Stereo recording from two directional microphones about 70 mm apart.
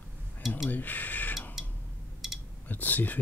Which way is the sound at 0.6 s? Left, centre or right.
Left.